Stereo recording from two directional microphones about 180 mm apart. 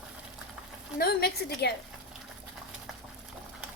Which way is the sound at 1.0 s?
60° left (ahead or behind).